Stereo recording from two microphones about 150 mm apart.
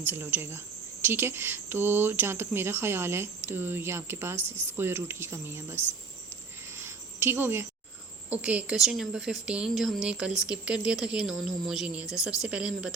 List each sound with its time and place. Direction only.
0.0 s speech: 15° right (ahead or behind)
6.7 s a sound: 15° right (ahead or behind)
8.3 s speech: 10° right (ahead or behind)